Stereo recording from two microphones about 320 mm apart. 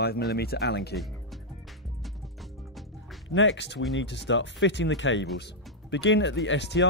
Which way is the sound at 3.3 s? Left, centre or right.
Left.